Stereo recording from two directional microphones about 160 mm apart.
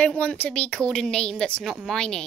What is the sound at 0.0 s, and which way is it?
A woman's voice, 5° left (ahead or behind).